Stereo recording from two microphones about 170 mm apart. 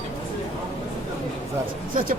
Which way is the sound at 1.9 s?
55° right (ahead or behind).